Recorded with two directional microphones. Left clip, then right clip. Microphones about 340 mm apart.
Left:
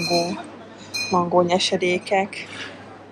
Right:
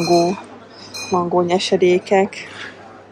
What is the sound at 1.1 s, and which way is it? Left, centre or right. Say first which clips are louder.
Speech: right 2 dB; centre.